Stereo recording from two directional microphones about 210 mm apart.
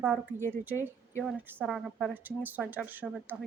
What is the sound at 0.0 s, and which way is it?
A woman's voice, 5° left (ahead or behind).